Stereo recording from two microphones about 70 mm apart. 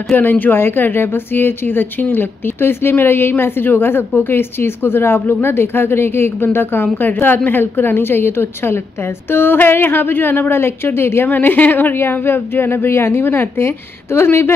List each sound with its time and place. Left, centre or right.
0.1 s speech: left